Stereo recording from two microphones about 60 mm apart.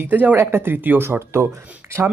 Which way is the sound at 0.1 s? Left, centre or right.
Right.